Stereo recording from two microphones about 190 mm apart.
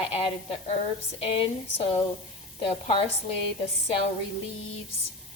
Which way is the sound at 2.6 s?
25° left (ahead or behind).